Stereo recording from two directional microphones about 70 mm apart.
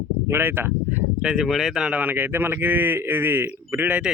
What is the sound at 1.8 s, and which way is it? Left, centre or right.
Speech, right.